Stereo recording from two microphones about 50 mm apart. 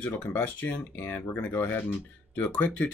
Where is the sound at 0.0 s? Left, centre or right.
Left.